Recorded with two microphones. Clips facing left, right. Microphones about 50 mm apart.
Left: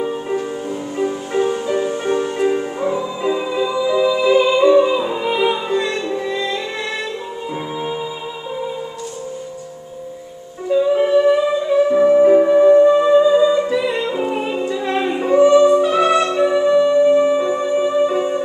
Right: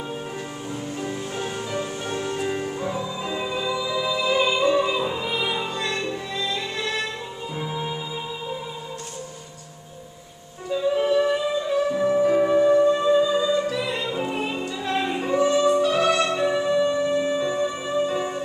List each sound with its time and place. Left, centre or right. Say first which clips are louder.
0.9 s music: left 13 dB; left
10.7 s music: left 7 dB; centre
11.9 s music: left 10 dB; left
12.4 s music: left 7 dB; centre